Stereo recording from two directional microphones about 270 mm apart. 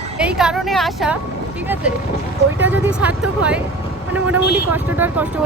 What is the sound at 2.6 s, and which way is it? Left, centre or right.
Speech, centre.